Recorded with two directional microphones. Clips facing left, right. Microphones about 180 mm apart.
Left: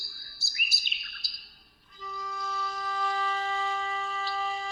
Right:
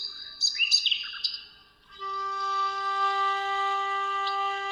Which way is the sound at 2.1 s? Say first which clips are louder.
Right 2 dB; centre (ahead or behind).